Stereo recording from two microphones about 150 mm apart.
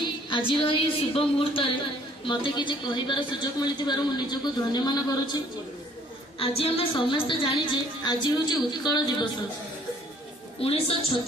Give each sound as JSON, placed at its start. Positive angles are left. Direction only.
{"t": 0.0, "sound": "a woman's voice", "side_deg": 35}
{"t": 6.4, "sound": "a woman's voice", "side_deg": 40}
{"t": 10.6, "sound": "a woman's voice", "side_deg": 40}